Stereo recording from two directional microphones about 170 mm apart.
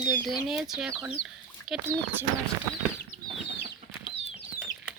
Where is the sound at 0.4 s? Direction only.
Centre (ahead or behind).